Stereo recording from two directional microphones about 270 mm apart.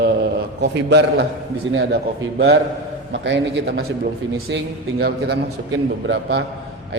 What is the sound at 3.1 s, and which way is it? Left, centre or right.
A man's voice, right.